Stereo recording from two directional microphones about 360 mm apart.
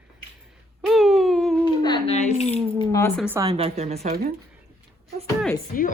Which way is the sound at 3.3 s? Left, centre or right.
Centre.